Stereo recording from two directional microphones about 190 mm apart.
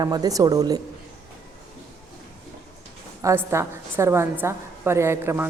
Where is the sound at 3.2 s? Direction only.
15° right (ahead or behind).